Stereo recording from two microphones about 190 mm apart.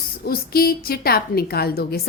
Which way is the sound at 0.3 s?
50° left (ahead or behind).